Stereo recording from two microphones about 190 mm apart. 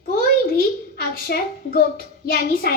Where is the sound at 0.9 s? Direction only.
50° left (ahead or behind).